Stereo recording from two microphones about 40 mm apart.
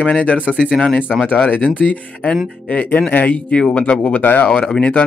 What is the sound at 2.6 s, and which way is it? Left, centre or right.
Speech, left.